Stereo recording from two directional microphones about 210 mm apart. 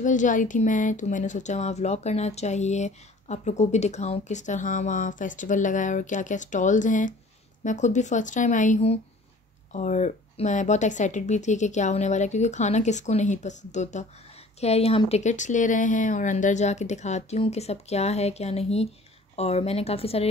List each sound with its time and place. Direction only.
0.0 s a woman's voice: 35° left (ahead or behind)